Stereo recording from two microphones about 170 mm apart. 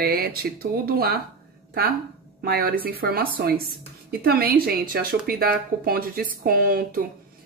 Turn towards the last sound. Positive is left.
turn(degrees=-60)  # may be behind; listen again after turning